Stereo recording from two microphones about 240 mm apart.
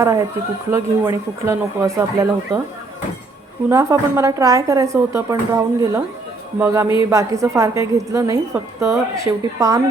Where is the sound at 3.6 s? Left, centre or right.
Centre.